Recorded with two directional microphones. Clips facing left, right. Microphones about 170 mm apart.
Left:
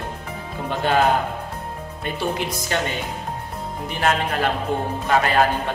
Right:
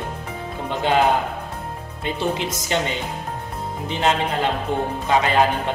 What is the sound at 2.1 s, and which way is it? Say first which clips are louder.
Speech: right 1 dB; 20° right (ahead or behind).